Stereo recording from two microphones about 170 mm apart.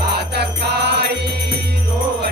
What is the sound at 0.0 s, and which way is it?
Music, 70° right (ahead or behind).